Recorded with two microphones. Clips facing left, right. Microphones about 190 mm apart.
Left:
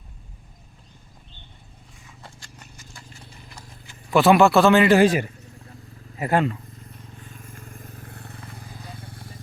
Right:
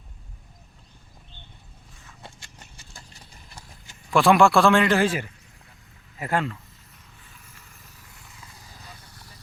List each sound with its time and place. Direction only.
2.2 s clip-clop: 25° right (ahead or behind)
4.1 s a man's voice: 5° left (ahead or behind); by 6.5 s 20° left (ahead or behind)
7.3 s vehicle: 50° left (ahead or behind)